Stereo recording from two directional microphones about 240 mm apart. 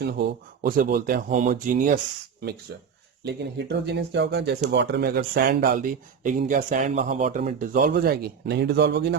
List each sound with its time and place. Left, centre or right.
0.0 s speech: right
3.2 s speech: right